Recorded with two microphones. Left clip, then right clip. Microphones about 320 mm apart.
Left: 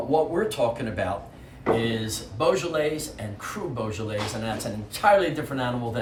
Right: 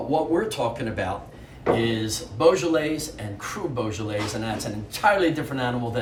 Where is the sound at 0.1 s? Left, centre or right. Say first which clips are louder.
Even; centre.